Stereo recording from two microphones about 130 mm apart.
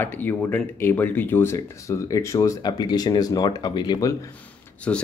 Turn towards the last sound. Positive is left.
turn(degrees=10)  # may be behind; listen again after turning